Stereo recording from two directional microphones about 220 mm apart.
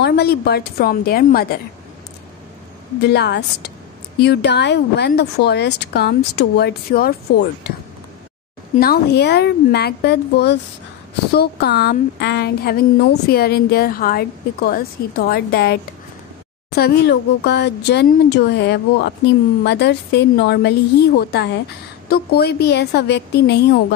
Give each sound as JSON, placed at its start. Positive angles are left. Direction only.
{"t": 0.0, "sound": "speech", "side_deg": 45}
{"t": 3.1, "sound": "speech", "side_deg": 50}
{"t": 8.7, "sound": "speech", "side_deg": 45}